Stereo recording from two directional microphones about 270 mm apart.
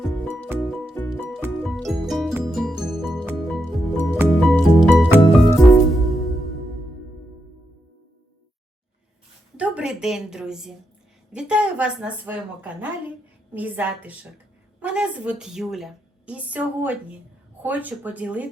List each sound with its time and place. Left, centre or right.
0.0 s music: centre
9.6 s a sound: centre
11.3 s a woman's voice: centre